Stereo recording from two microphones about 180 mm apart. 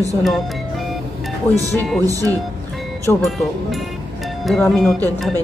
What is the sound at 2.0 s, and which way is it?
Speech, 20° right (ahead or behind).